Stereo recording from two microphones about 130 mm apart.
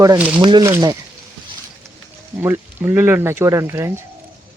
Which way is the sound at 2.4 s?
20° right (ahead or behind).